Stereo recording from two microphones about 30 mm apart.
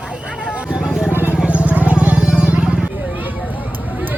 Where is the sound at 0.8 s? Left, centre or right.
Centre.